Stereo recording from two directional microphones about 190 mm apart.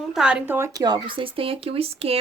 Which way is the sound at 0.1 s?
5° right (ahead or behind).